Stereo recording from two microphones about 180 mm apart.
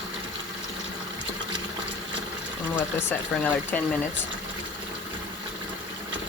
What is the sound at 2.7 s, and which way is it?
Speech, 10° left (ahead or behind).